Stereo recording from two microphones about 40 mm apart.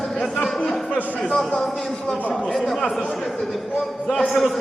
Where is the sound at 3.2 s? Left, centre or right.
Centre.